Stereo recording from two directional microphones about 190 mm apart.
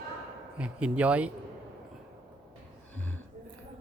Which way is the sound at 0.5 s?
5° right (ahead or behind).